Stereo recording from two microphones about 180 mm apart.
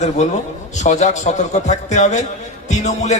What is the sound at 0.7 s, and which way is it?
A man's voice, 40° left (ahead or behind).